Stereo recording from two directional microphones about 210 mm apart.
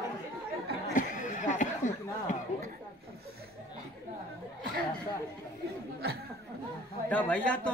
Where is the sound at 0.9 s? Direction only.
40° left (ahead or behind).